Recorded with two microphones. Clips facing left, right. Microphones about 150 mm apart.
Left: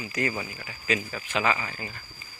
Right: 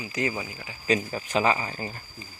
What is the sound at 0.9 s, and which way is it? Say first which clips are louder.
Speech: right 4 dB; 35° right (ahead or behind).